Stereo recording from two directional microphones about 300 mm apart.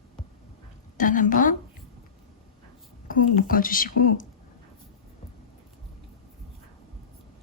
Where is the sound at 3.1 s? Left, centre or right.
Left.